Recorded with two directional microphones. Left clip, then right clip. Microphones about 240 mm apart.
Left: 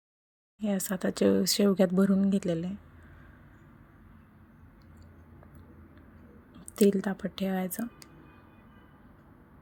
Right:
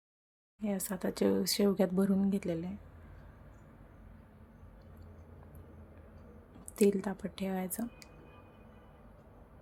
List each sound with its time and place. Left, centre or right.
0.6 s speech: centre
6.7 s speech: centre